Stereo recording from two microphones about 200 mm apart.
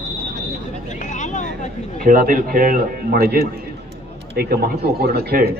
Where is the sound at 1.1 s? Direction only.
40° left (ahead or behind).